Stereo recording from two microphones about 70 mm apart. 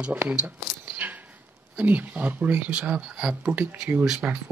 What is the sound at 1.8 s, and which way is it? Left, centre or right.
Speech, right.